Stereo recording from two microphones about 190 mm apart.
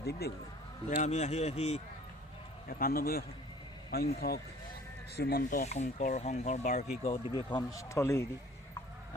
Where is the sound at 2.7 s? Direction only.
50° left (ahead or behind).